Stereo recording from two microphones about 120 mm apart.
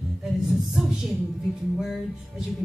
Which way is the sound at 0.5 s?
Centre (ahead or behind).